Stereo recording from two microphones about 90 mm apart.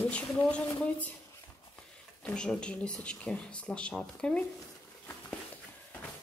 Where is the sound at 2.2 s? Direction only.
10° left (ahead or behind).